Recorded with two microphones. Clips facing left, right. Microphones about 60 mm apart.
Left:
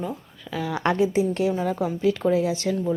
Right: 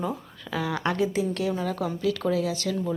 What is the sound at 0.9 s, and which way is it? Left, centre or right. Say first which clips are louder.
Speech: left 4 dB; centre.